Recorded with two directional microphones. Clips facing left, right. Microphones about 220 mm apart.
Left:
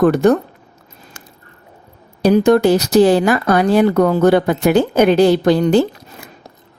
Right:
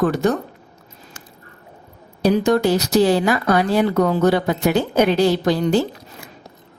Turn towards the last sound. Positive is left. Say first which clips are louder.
# left 5 dB
turn(degrees=60)  # may be behind; listen again after turning